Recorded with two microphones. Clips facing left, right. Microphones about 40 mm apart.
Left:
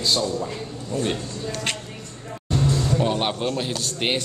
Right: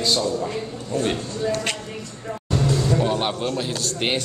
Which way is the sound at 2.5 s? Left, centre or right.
Centre.